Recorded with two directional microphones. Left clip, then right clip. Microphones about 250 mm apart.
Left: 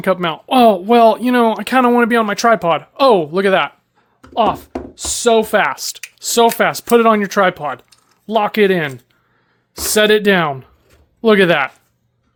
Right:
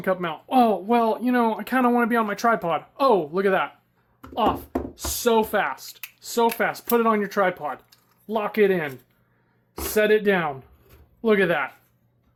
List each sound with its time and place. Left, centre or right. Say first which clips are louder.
0.0 s speech: left 8 dB; left